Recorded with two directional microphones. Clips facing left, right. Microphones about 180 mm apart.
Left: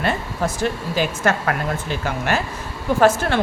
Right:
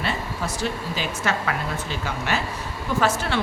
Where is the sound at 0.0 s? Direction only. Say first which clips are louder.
Left 5 dB; 50° left (ahead or behind).